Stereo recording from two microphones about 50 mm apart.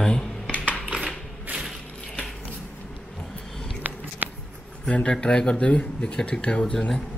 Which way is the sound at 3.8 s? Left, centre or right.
Right.